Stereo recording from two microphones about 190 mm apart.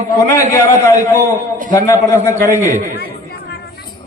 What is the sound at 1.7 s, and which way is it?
Speech, 15° left (ahead or behind).